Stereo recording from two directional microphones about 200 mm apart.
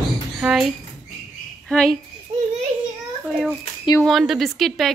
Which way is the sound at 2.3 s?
30° right (ahead or behind).